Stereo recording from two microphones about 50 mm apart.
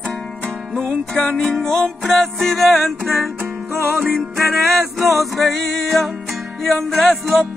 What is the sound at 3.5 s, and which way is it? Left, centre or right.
Music, right.